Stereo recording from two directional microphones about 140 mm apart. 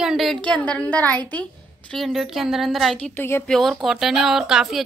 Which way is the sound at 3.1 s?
15° left (ahead or behind).